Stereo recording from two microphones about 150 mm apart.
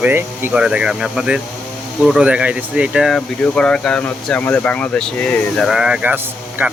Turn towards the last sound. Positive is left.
turn(degrees=-15)  # may be behind; listen again after turning